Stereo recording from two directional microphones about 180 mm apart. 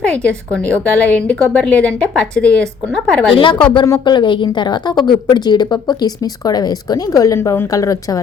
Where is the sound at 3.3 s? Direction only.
30° left (ahead or behind).